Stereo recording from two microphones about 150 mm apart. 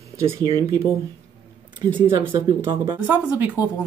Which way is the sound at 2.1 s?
35° right (ahead or behind).